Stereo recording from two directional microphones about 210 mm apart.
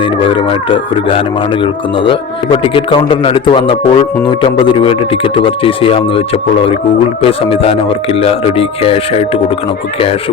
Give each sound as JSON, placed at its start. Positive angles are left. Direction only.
{"t": 0.0, "sound": "speech", "side_deg": 25}